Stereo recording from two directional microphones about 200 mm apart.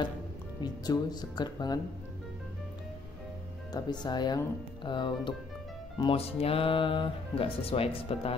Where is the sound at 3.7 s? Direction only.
20° left (ahead or behind).